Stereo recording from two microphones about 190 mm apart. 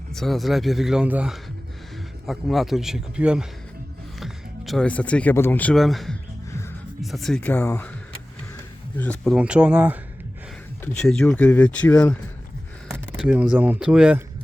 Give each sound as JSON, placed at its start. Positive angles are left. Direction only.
{"t": 0.1, "sound": "speech", "side_deg": 0}
{"t": 9.0, "sound": "speech", "side_deg": 5}
{"t": 11.1, "sound": "speech", "side_deg": 5}
{"t": 13.1, "sound": "speech", "side_deg": -5}